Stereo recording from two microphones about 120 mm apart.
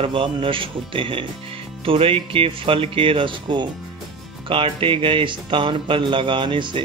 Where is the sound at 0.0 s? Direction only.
45° right (ahead or behind).